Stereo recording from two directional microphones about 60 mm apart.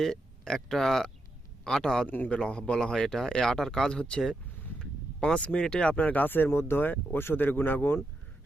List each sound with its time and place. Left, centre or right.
0.0 s speech: centre
2.0 s speech: left
2.3 s speech: centre